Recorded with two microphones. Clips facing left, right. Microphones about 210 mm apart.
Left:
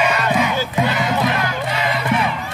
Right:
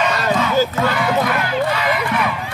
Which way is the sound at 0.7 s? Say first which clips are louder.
Right 1 dB; 20° left (ahead or behind).